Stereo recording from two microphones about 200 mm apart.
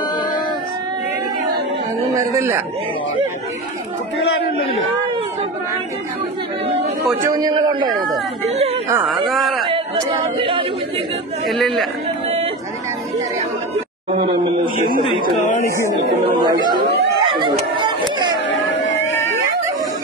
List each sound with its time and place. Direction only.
2.1 s a man's voice: 15° right (ahead or behind)
7.2 s a man's voice: 20° right (ahead or behind)
8.5 s a woman's voice: 30° right (ahead or behind)
9.1 s speech: centre (ahead or behind)
9.7 s speech: 25° right (ahead or behind)
11.4 s speech: centre (ahead or behind)
14.6 s a man's voice: 45° right (ahead or behind)
16.3 s chatter: 20° right (ahead or behind)
18.5 s a sound: 65° left (ahead or behind)